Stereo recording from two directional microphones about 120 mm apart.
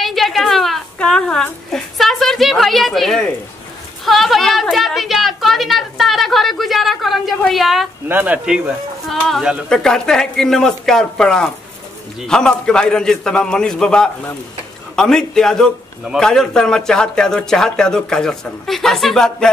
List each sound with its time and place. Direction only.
0.0 s a woman's voice: centre (ahead or behind)
8.1 s a man's voice: 10° right (ahead or behind)
9.7 s a man's voice: 5° left (ahead or behind)